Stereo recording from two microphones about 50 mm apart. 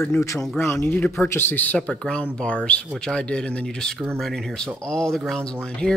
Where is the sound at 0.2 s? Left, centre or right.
Left.